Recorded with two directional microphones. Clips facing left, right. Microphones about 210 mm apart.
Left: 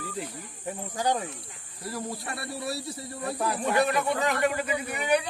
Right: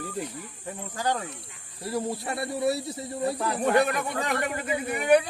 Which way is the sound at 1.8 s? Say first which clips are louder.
Right 5 dB; 25° right (ahead or behind).